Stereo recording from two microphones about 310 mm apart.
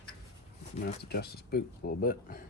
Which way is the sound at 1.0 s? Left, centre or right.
Left.